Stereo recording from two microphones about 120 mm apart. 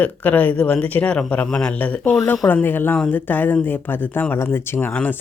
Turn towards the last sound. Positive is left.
turn(degrees=15)  # may be behind; listen again after turning